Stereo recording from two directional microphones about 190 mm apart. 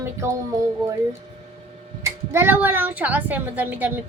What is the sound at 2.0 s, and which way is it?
A woman's voice, 10° right (ahead or behind).